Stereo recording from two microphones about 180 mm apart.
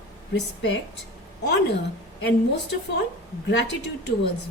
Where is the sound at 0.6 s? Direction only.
85° left.